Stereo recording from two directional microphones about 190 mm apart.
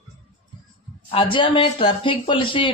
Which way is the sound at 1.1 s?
25° left (ahead or behind).